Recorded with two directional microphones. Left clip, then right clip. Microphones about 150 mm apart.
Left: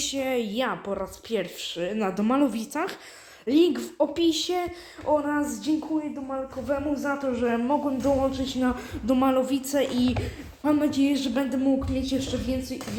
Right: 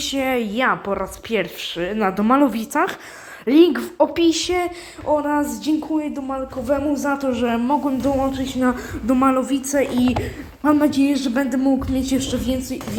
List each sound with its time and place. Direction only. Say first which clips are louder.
0.1 s a woman's voice: right 6 dB; 10° right (ahead or behind)
4.5 s a woman's voice: right 7 dB; 15° right (ahead or behind)
5.3 s a sound: right 6 dB; 25° right (ahead or behind)
6.0 s speech: right 6 dB; 50° right (ahead or behind); by 7.6 s 35° right (ahead or behind)
7.7 s a sound: right 5 dB; 20° right (ahead or behind)
8.2 s a woman's voice: right 5 dB; 5° right (ahead or behind)
10.6 s a woman's voice: right 7 dB; 35° right (ahead or behind)
11.0 s a woman's voice: right 5 dB; 15° right (ahead or behind)
11.5 s a sound: right 4 dB; 30° right (ahead or behind)
11.9 s speech: right 6 dB; 50° right (ahead or behind)